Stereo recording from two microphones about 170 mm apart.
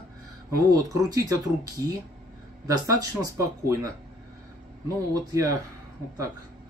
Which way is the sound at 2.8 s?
20° right (ahead or behind).